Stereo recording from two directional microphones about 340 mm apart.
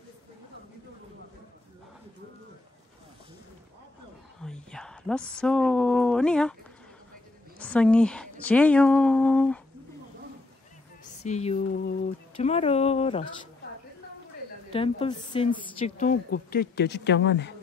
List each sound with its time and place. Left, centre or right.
4.4 s a sound: centre
7.5 s a woman's voice: centre
11.2 s a woman's voice: centre
14.7 s a woman's voice: centre; by 17.5 s left